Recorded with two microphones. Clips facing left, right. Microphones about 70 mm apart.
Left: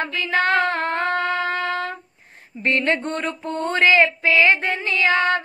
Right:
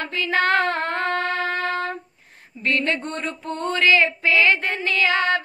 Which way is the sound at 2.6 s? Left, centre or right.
Left.